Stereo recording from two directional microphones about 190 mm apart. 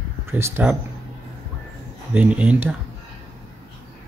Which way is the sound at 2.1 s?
5° right (ahead or behind).